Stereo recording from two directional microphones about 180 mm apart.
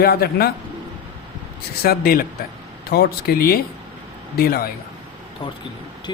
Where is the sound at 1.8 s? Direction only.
55° left (ahead or behind).